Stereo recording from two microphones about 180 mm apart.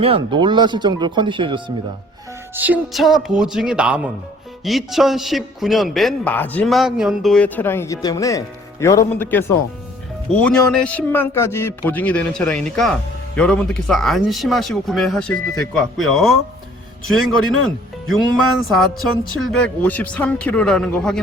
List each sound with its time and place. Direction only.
0.0 s speech: 30° right (ahead or behind)
2.6 s a man's voice: 10° right (ahead or behind); by 9.4 s 10° left (ahead or behind)
10.4 s a man's voice: 5° left (ahead or behind)